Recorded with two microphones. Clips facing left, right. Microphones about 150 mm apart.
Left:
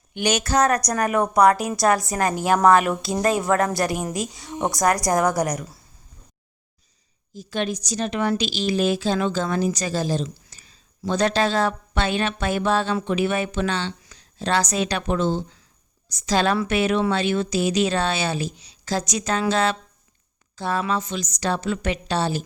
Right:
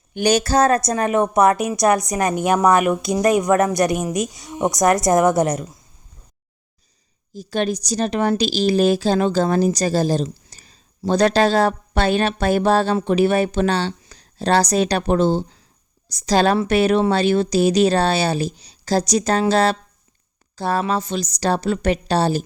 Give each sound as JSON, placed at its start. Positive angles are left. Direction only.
{"t": 0.1, "sound": "a woman's voice", "side_deg": -35}
{"t": 7.3, "sound": "a woman's voice", "side_deg": -35}